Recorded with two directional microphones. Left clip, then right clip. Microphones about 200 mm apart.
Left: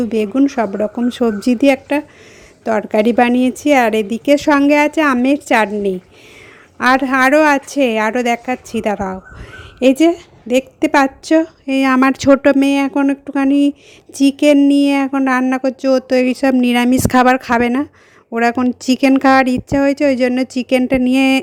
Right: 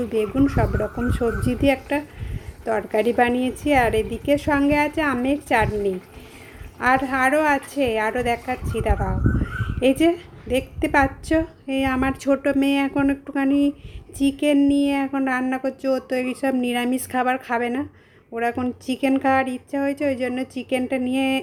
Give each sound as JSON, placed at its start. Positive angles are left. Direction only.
{"t": 0.0, "sound": "a woman's voice", "side_deg": 40}